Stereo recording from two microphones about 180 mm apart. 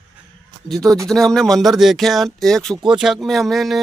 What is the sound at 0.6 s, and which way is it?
Speech, centre (ahead or behind).